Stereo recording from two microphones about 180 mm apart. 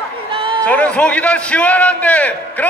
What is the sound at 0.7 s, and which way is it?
A man's voice, 10° left (ahead or behind).